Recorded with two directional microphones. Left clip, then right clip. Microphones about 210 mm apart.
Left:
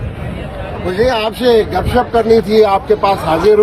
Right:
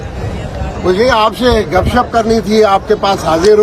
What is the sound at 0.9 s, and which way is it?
Speech, 40° right (ahead or behind).